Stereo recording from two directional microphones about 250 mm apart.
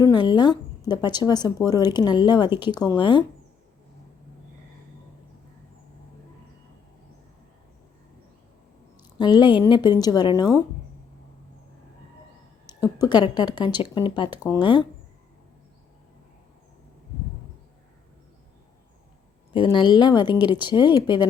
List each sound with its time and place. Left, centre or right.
0.0 s speech: centre
9.1 s speech: centre
12.8 s speech: centre
19.5 s speech: centre